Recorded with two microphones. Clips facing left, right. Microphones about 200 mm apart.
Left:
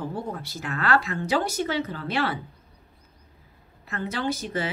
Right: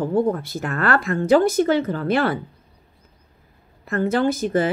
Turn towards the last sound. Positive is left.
turn(degrees=-50)  # may be behind; listen again after turning